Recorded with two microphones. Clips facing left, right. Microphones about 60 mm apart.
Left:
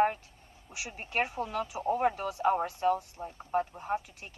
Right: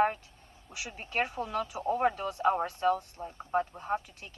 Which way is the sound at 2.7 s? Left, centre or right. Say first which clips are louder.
Even; right.